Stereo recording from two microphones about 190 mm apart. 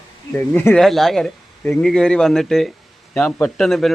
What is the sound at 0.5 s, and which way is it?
A man's voice, 5° left (ahead or behind).